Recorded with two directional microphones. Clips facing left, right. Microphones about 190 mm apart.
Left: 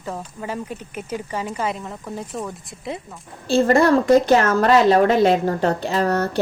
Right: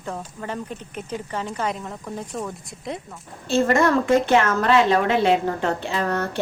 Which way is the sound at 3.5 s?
35° left (ahead or behind).